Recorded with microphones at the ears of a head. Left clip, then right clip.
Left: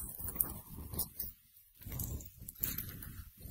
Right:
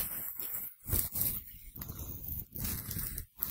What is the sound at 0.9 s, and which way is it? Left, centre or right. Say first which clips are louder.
Zipper: right 9 dB; right.